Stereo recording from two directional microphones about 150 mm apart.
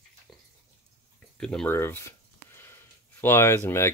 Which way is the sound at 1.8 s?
15° left (ahead or behind).